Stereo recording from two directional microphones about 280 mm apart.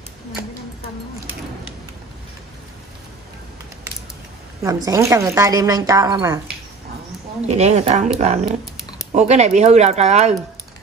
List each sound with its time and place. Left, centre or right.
4.6 s speech: centre
7.4 s speech: right